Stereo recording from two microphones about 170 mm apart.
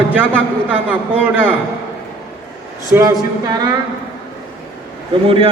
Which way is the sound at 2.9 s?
15° right (ahead or behind).